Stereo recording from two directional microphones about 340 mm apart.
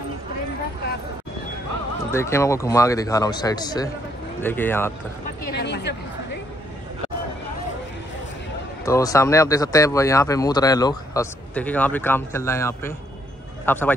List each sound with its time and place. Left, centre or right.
2.0 s speech: centre
5.5 s a sound: left
8.8 s a man's voice: centre